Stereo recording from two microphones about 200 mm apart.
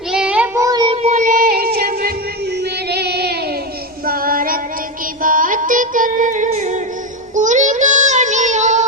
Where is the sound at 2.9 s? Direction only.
55° right (ahead or behind).